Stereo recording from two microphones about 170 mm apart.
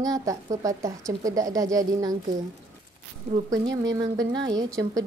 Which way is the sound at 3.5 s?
20° right (ahead or behind).